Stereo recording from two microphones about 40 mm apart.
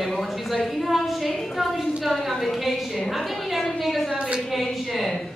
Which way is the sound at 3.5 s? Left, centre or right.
Centre.